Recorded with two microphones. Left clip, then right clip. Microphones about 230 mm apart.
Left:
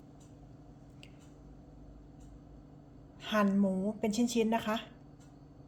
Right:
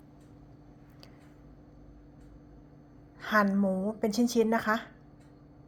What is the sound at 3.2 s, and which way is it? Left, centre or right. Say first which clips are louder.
A woman's voice: right 4 dB; centre.